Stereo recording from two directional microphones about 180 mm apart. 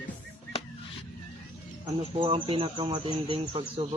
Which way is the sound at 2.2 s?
30° right (ahead or behind).